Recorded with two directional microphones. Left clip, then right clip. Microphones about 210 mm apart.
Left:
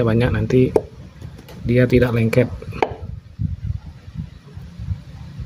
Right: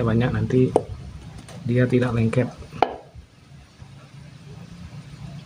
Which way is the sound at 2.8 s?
15° left (ahead or behind).